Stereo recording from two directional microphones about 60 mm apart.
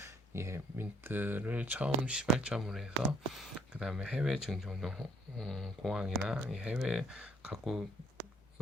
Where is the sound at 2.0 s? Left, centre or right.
Centre.